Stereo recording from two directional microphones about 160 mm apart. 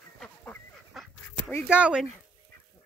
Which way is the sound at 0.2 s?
Centre (ahead or behind).